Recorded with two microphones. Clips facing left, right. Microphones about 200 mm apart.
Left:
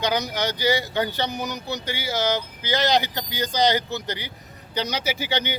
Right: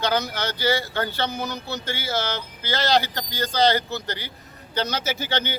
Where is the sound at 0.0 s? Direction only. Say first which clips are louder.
Even; 15° left (ahead or behind).